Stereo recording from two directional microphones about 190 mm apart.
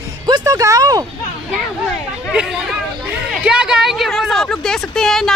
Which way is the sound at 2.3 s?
5° right (ahead or behind).